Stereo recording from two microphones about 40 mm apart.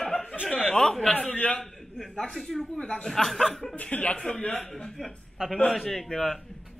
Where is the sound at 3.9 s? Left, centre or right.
Left.